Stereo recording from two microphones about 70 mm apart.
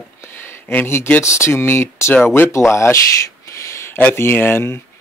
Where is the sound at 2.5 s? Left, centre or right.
Left.